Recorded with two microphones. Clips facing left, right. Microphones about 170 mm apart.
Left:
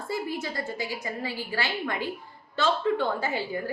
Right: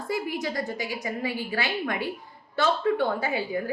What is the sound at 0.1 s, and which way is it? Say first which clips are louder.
A woman's voice: right 2 dB; 15° right (ahead or behind).